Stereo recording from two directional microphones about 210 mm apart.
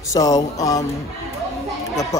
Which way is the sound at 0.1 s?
20° left (ahead or behind).